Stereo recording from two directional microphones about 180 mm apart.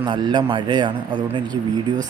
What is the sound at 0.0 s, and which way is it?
Speech, 25° right (ahead or behind).